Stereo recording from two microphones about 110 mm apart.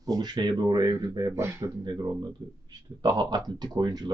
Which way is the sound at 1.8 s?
35° right (ahead or behind).